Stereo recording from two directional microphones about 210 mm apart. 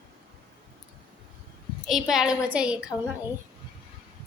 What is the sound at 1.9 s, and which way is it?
Speech, centre (ahead or behind).